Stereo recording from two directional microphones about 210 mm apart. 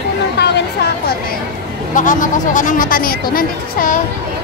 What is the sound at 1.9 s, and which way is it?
Speech, 40° left (ahead or behind).